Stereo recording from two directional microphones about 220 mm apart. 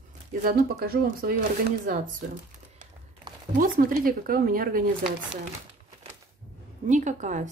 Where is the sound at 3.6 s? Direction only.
40° right (ahead or behind).